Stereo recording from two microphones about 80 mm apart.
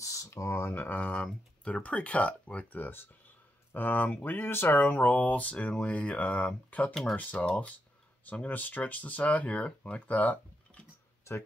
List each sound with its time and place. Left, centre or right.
0.0 s speech: left; by 6.9 s centre
6.9 s speech: centre
7.2 s speech: centre